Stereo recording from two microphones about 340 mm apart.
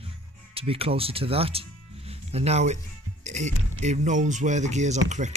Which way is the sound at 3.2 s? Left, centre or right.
Centre.